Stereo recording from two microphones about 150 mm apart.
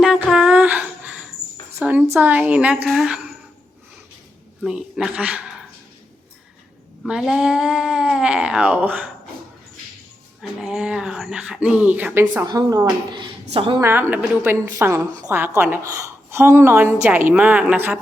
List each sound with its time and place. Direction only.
0.0 s a sound: 5° right (ahead or behind)
2.1 s a woman's voice: 10° right (ahead or behind)
4.6 s speech: centre (ahead or behind)
7.0 s speech: centre (ahead or behind)
10.4 s a woman's voice: 5° right (ahead or behind)
12.5 s a woman's voice: 25° right (ahead or behind)
13.8 s a woman's voice: 15° right (ahead or behind)